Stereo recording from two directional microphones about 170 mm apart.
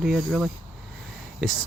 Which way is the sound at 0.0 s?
Centre (ahead or behind).